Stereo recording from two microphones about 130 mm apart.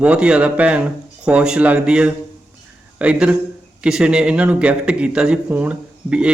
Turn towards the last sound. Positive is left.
turn(degrees=-10)  # may be behind; listen again after turning